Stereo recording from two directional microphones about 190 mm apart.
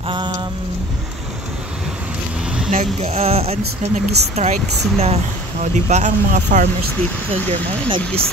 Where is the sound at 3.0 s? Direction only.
35° right (ahead or behind).